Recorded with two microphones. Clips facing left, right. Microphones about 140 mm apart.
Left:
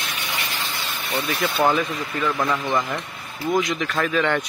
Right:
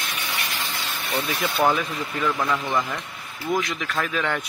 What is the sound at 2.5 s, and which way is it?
Speech, 15° left (ahead or behind).